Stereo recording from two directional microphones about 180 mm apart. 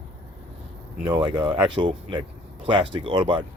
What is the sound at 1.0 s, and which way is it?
Speech, 25° right (ahead or behind).